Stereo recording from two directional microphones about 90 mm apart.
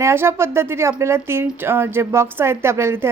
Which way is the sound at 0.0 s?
30° right (ahead or behind).